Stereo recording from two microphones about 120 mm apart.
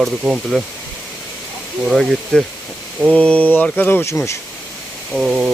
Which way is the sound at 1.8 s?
Centre (ahead or behind).